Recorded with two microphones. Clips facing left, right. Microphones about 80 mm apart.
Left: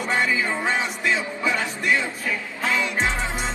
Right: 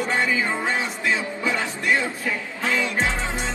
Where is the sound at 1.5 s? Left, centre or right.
Right.